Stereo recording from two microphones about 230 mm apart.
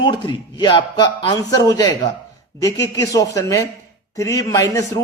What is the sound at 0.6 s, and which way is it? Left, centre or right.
A man's voice, centre.